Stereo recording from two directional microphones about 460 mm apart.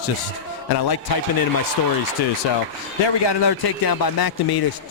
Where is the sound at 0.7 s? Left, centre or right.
Left.